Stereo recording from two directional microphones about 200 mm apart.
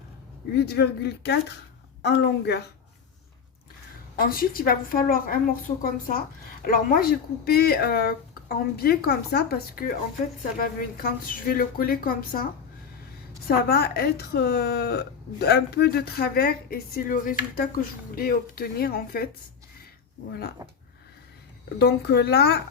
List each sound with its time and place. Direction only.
0.5 s speech: 55° left (ahead or behind)
4.3 s a woman's voice: 45° left (ahead or behind)
10.9 s a woman's voice: 45° left (ahead or behind)
13.7 s a woman's voice: 50° left (ahead or behind)
21.8 s speech: 55° left (ahead or behind)